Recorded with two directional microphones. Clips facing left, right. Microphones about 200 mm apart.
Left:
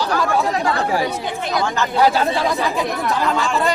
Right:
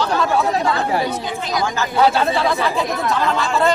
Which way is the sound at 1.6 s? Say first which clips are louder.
Left 1 dB; 10° right (ahead or behind).